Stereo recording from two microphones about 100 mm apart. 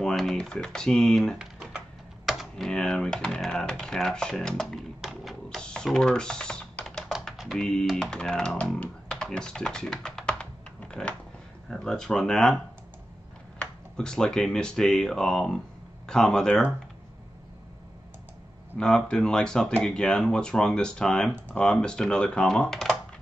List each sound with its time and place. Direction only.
0.0 s speech: centre (ahead or behind)
1.4 s typing: 5° right (ahead or behind)
2.2 s speech: centre (ahead or behind)
5.6 s typing: 10° left (ahead or behind)
7.1 s typing: 5° right (ahead or behind)
7.5 s speech: 5° left (ahead or behind)
13.6 s speech: 10° left (ahead or behind)
18.8 s speech: 10° left (ahead or behind)